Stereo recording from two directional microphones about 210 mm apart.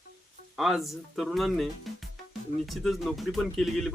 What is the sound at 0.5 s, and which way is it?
Speech, centre (ahead or behind).